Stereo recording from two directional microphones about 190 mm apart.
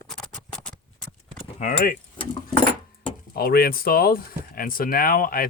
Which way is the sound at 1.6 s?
45° left (ahead or behind).